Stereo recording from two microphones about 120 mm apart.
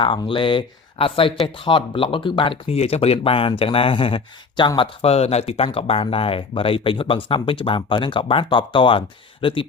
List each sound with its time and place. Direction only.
0.0 s speech: 45° left (ahead or behind)
4.8 s speech: 55° left (ahead or behind)